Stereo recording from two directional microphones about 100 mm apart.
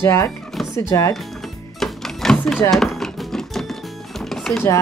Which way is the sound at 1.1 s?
Centre (ahead or behind).